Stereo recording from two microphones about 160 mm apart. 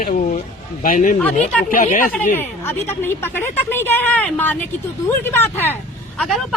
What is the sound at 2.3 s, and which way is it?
A woman's voice, 15° left (ahead or behind).